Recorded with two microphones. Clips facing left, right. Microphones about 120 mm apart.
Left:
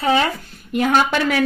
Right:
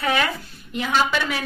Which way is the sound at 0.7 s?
50° left (ahead or behind).